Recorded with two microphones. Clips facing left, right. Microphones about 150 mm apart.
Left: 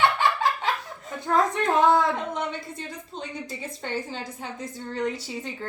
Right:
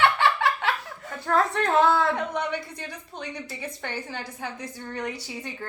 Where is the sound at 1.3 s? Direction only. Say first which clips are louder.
Even; 15° left (ahead or behind).